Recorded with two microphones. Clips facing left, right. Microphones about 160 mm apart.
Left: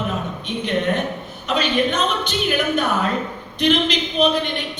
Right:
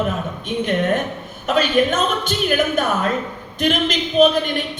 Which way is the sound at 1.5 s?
45° right (ahead or behind).